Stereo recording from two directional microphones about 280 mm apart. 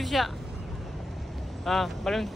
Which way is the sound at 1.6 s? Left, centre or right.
Centre.